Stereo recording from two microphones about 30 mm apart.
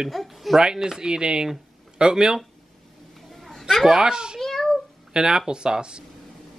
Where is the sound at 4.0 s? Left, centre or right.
Right.